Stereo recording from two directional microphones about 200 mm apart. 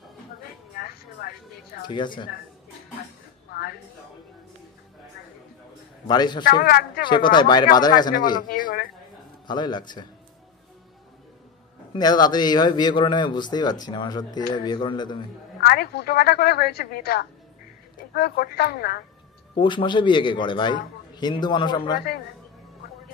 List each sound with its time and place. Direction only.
0.7 s vehicle: 50° left (ahead or behind)
1.9 s a man's voice: 25° left (ahead or behind)
6.0 s a man's voice: 20° left (ahead or behind)
6.4 s a woman's voice: 50° left (ahead or behind)
7.1 s a man's voice: 25° left (ahead or behind)
8.4 s a woman's voice: 45° left (ahead or behind)
9.5 s a man's voice: 20° left (ahead or behind)
11.9 s a man's voice: 20° left (ahead or behind)
15.6 s a woman's voice: 50° left (ahead or behind)
19.5 s a man's voice: 25° left (ahead or behind)